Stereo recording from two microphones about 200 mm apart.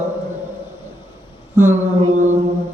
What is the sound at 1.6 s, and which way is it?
Speech, 10° right (ahead or behind).